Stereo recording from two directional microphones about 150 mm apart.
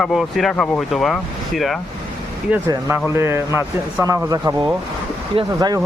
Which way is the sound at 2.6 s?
20° right (ahead or behind).